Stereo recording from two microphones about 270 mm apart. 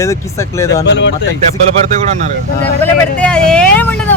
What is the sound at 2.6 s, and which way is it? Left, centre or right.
Speech, centre.